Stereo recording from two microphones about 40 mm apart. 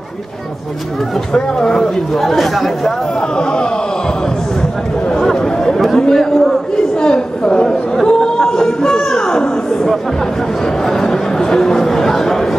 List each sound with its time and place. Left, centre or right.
1.3 s speech: centre
2.1 s speech: centre
3.2 s speech: left
5.2 s a sound: centre
5.9 s a man's voice: centre
7.0 s chatter: centre
8.1 s a sound: centre
10.9 s chatter: centre